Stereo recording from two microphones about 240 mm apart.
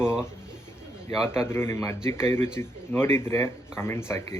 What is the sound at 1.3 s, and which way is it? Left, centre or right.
Speech, centre.